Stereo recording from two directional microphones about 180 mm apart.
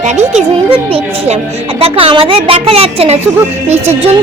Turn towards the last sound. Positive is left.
turn(degrees=-35)  # may be behind; listen again after turning